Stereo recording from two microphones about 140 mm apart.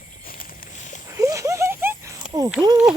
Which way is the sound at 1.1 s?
20° right (ahead or behind).